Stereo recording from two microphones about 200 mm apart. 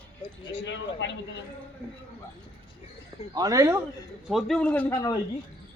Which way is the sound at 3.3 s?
15° right (ahead or behind).